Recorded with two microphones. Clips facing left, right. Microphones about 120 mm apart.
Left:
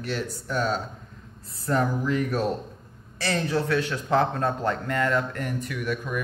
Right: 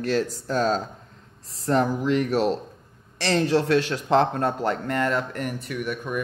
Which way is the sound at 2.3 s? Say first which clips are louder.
Right 4 dB; 85° right.